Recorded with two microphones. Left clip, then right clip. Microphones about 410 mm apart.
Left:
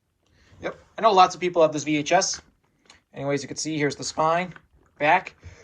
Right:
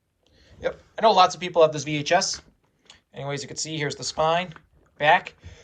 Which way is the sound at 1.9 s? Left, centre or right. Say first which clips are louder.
Left 1 dB; right.